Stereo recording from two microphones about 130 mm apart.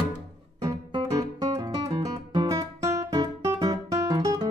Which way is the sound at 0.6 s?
25° right (ahead or behind).